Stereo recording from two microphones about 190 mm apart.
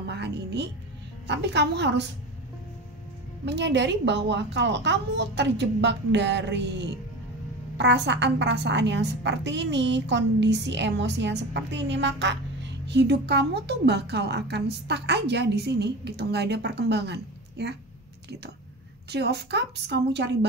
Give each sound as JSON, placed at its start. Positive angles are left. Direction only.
{"t": 0.0, "sound": "music", "side_deg": -65}
{"t": 1.2, "sound": "a woman's voice", "side_deg": -65}
{"t": 3.4, "sound": "a woman's voice", "side_deg": -65}
{"t": 19.0, "sound": "a woman's voice", "side_deg": -60}